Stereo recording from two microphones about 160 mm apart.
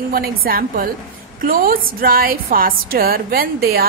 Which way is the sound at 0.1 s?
70° right (ahead or behind).